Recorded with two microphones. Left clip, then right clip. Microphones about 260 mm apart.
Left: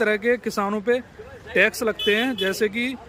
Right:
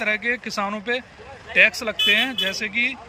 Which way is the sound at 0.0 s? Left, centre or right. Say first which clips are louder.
Left 2 dB; centre.